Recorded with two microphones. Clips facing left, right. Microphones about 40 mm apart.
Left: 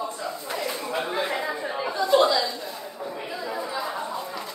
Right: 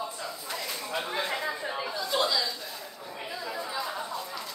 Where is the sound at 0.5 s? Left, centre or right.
Centre.